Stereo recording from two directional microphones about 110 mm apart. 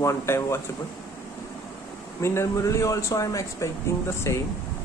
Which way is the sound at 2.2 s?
25° left (ahead or behind).